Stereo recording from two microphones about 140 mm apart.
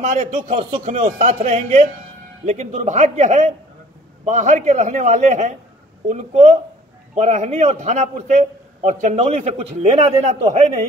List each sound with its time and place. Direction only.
0.0 s a man's voice: 55° right (ahead or behind)